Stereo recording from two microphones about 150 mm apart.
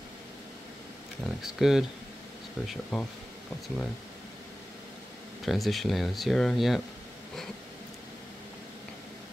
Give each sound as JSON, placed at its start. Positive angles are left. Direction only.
{"t": 1.2, "sound": "speech", "side_deg": 0}
{"t": 5.4, "sound": "speech", "side_deg": 0}